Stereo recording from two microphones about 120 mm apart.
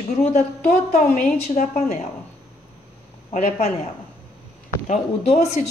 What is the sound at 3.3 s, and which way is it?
Speech, 70° left (ahead or behind).